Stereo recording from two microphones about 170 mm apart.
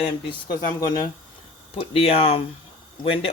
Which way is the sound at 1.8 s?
35° left (ahead or behind).